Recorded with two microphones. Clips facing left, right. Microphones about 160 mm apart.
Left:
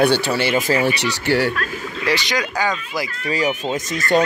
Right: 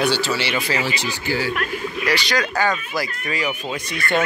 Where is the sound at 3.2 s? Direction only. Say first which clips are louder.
Left 4 dB; 40° left (ahead or behind).